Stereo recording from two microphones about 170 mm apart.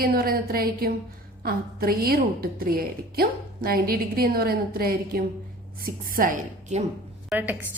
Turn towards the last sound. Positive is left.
turn(degrees=-10)  # may be behind; listen again after turning